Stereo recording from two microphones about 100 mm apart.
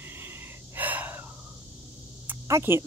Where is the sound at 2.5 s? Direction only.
25° right (ahead or behind).